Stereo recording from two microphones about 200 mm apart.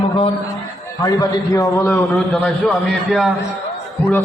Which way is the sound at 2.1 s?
5° left (ahead or behind).